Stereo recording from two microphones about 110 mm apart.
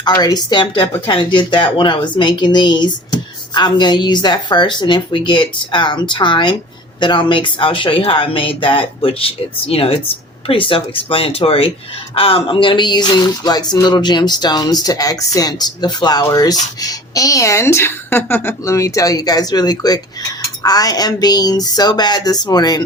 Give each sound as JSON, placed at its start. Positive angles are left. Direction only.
{"t": 0.0, "sound": "a woman's voice", "side_deg": 35}